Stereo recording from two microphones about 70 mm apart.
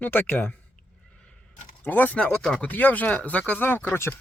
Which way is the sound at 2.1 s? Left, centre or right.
Centre.